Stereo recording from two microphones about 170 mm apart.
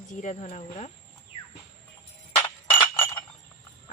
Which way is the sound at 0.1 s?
45° left (ahead or behind).